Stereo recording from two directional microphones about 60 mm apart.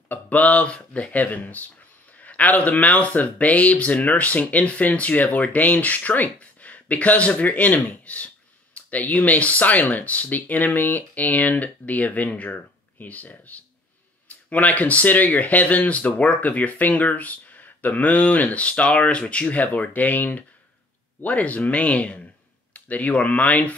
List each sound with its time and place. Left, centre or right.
0.1 s speech: left